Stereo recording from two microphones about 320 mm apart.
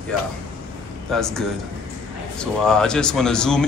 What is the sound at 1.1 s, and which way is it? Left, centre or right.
Speech, centre.